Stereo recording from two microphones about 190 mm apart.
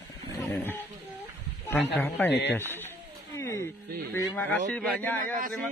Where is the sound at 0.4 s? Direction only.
10° left (ahead or behind).